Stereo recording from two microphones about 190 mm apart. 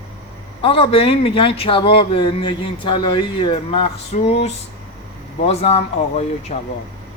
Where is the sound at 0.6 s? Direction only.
30° left (ahead or behind).